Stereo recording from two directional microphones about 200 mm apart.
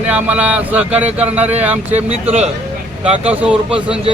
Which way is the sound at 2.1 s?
35° right (ahead or behind).